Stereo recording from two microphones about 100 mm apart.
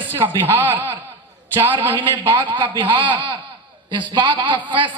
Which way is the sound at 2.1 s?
50° right (ahead or behind).